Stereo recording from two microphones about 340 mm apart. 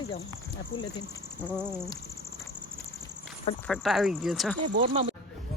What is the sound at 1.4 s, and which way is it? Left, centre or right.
Speech, centre.